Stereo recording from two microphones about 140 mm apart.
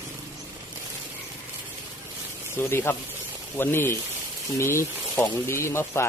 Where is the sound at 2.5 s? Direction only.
15° left (ahead or behind).